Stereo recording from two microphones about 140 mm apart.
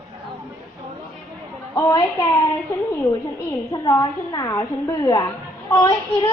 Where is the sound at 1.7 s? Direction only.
25° left (ahead or behind).